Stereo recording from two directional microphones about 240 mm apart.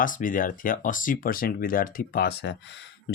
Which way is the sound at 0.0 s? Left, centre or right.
Left.